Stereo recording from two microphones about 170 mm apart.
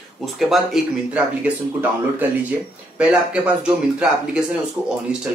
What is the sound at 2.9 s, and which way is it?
Speech, 5° right (ahead or behind).